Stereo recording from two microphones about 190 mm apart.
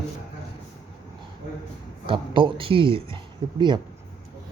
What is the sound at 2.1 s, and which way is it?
Speech, 25° right (ahead or behind).